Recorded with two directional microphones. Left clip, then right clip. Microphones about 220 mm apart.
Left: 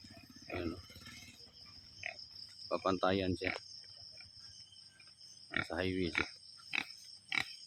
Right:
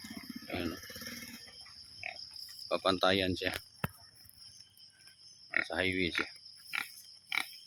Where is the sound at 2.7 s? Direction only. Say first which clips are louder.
Right 4 dB; 5° right (ahead or behind).